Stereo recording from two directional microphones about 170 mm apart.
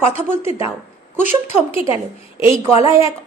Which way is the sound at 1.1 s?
40° left (ahead or behind).